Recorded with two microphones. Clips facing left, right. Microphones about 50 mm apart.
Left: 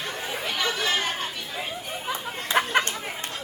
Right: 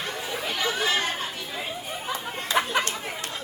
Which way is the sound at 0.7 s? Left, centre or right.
Right.